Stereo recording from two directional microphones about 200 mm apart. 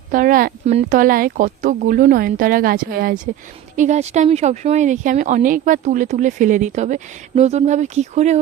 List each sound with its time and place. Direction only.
0.1 s speech: 45° right (ahead or behind)
0.6 s speech: 35° right (ahead or behind); by 3.2 s 50° right (ahead or behind)
3.8 s speech: 35° right (ahead or behind)